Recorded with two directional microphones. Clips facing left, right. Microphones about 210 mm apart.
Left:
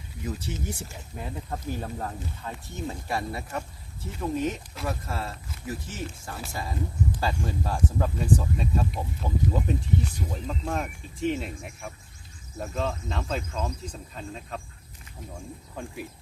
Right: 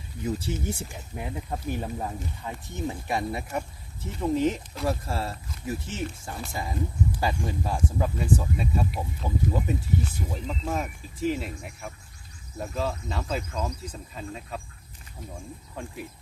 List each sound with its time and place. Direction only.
0.3 s speech: 30° right (ahead or behind)
0.8 s speech: 15° right (ahead or behind)
12.5 s cricket: 5° right (ahead or behind)
15.7 s cricket: centre (ahead or behind)